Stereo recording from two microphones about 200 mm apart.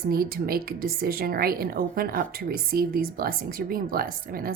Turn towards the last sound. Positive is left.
turn(degrees=-45)  # may be behind; listen again after turning